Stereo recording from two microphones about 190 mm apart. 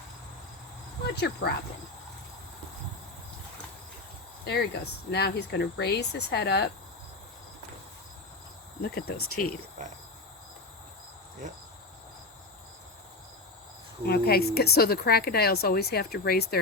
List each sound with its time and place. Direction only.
1.1 s speech: 60° left (ahead or behind)
4.4 s speech: 60° left (ahead or behind)
8.8 s speech: 55° left (ahead or behind)
9.8 s cricket: 40° right (ahead or behind)
14.1 s speech: 55° left (ahead or behind)